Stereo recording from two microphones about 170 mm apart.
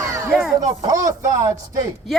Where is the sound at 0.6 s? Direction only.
20° right (ahead or behind).